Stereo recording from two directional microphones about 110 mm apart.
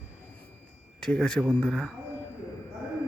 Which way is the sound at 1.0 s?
5° left (ahead or behind).